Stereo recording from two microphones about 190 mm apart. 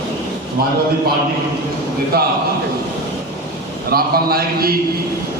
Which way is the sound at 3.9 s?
50° right (ahead or behind).